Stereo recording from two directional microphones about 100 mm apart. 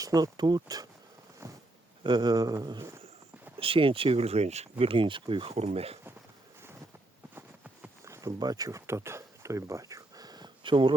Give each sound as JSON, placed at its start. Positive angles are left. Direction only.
{"t": 0.0, "sound": "speech", "side_deg": -40}
{"t": 2.0, "sound": "speech", "side_deg": -45}
{"t": 3.6, "sound": "speech", "side_deg": -65}
{"t": 7.3, "sound": "a sound", "side_deg": -15}
{"t": 8.0, "sound": "boat", "side_deg": -30}
{"t": 8.4, "sound": "speech", "side_deg": -40}